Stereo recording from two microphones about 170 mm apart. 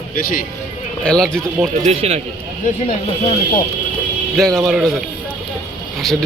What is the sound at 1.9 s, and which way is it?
Speech, 40° right (ahead or behind).